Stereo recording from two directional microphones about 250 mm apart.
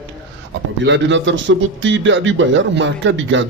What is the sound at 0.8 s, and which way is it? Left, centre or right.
A man's voice, right.